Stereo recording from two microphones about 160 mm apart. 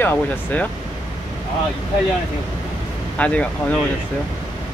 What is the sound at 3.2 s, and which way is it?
Speech, 10° left (ahead or behind).